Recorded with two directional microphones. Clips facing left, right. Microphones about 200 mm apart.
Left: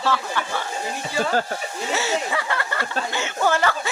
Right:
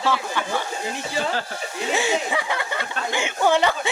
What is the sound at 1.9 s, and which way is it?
A man's voice, 15° right (ahead or behind).